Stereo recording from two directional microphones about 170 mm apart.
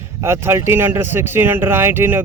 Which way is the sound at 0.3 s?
15° right (ahead or behind).